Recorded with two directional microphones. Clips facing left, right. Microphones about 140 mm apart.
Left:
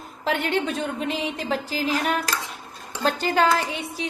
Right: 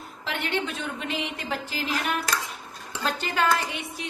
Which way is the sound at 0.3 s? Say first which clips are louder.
Left 5 dB; 45° left (ahead or behind).